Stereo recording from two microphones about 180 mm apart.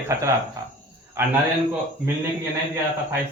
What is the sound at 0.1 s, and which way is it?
Speech, 15° right (ahead or behind).